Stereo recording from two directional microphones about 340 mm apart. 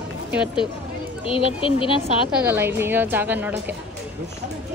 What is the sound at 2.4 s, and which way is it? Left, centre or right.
A woman's voice, centre.